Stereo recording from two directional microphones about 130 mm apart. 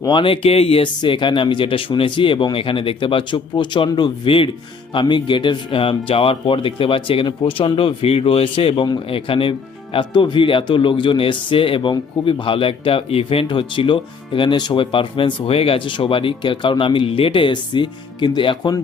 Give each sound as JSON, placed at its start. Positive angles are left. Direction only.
{"t": 0.0, "sound": "speech", "side_deg": 40}